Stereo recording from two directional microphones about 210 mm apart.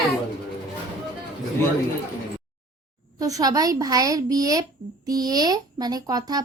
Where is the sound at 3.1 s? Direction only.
15° right (ahead or behind).